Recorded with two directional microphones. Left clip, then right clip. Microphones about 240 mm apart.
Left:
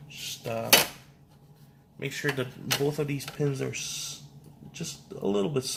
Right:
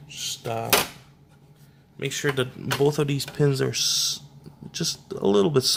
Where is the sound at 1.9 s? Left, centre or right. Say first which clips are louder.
Right 5 dB; right.